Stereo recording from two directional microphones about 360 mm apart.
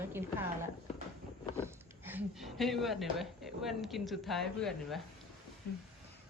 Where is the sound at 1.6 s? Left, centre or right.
Centre.